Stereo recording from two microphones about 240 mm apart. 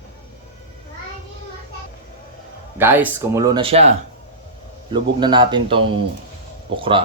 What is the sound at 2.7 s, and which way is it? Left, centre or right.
Speech, centre.